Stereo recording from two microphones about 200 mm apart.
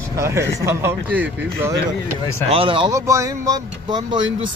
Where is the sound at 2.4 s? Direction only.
30° right (ahead or behind).